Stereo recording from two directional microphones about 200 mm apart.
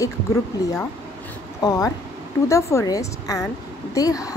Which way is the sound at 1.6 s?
20° left (ahead or behind).